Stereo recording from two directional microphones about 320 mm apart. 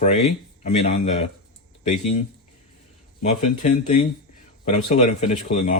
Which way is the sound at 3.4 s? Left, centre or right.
Left.